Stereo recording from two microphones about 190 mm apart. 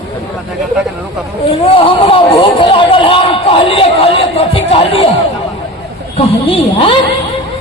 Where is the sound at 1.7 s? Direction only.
30° left (ahead or behind).